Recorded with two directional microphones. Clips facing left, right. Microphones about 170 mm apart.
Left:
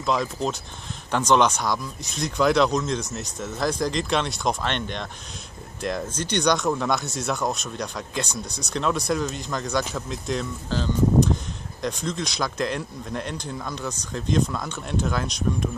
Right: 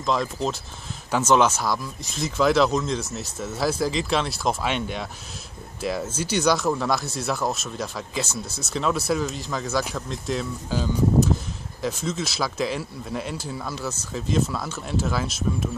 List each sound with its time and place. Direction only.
0.0 s speech: centre (ahead or behind)